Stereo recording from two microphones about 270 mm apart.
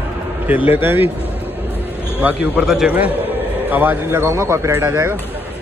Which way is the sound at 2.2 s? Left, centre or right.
Centre.